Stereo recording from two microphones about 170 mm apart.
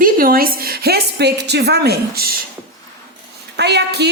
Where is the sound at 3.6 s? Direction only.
80° right.